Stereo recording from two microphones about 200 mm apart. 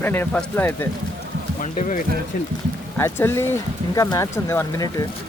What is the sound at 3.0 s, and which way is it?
Speech, 10° left (ahead or behind).